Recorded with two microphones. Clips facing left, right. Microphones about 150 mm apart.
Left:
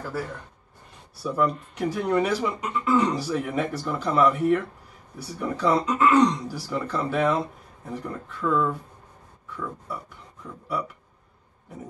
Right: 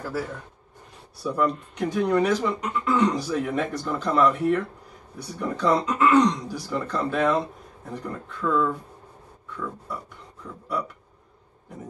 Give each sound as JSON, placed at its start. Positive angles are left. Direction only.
{"t": 0.1, "sound": "speech", "side_deg": 0}
{"t": 9.5, "sound": "a sound", "side_deg": 5}
{"t": 10.4, "sound": "speech", "side_deg": 5}